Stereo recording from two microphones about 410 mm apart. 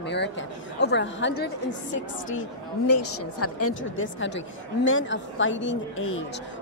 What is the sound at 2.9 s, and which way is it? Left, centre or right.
A woman's voice, left.